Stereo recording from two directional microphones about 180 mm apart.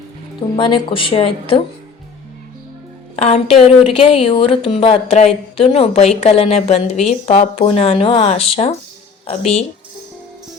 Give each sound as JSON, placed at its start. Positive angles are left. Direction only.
{"t": 0.5, "sound": "speech", "side_deg": 30}
{"t": 3.2, "sound": "speech", "side_deg": 35}